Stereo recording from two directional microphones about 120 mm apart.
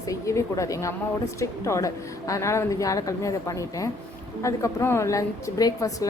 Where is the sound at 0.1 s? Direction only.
25° left (ahead or behind).